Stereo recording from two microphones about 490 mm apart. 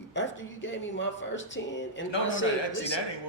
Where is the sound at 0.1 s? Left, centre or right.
Left.